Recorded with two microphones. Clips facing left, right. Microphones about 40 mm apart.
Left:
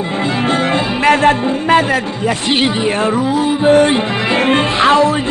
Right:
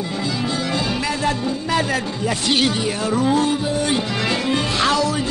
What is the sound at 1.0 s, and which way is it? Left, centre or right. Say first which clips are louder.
Music: left 10 dB; left.